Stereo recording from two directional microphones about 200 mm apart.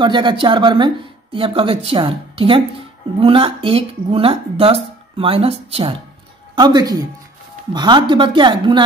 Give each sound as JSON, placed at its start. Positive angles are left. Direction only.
{"t": 0.0, "sound": "speech", "side_deg": -25}